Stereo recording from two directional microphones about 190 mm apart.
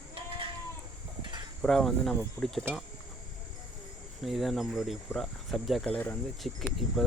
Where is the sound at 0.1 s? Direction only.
25° right (ahead or behind).